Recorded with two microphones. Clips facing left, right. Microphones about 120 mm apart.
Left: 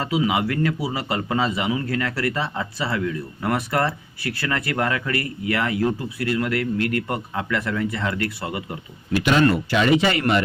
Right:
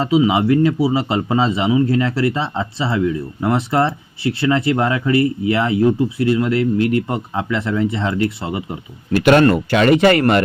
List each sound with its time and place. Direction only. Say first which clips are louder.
0.0 s speech: right 7 dB; 25° right (ahead or behind)
9.1 s speech: right 6 dB; 55° right (ahead or behind)